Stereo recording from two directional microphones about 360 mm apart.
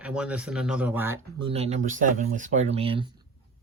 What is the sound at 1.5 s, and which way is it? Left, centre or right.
Speech, centre.